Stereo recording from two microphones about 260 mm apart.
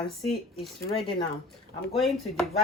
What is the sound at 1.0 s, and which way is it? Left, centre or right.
Speech, left.